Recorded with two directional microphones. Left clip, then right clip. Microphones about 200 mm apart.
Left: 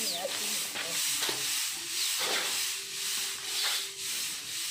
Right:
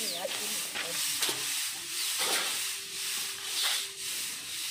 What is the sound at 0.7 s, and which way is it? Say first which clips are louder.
Hiss: left 1 dB; 45° right (ahead or behind).